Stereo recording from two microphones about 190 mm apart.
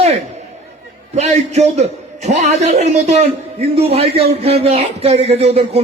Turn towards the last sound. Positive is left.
turn(degrees=-30)  # may be behind; listen again after turning